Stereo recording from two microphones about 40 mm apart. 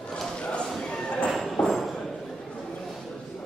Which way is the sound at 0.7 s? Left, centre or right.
Centre.